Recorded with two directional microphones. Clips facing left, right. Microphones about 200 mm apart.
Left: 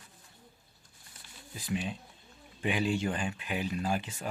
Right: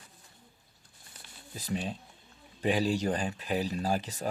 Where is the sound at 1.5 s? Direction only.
40° right (ahead or behind).